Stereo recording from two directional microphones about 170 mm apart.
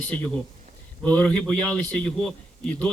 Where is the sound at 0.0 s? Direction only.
5° left (ahead or behind).